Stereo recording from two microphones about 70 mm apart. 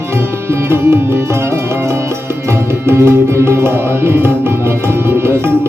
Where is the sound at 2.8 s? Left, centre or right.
Right.